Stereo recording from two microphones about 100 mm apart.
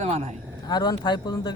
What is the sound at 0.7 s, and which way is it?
Speech, 45° left (ahead or behind).